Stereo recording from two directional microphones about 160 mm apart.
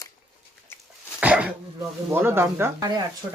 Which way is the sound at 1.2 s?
10° right (ahead or behind).